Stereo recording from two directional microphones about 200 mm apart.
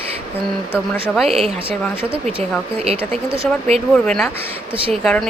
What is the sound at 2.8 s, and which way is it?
Speech, 30° right (ahead or behind).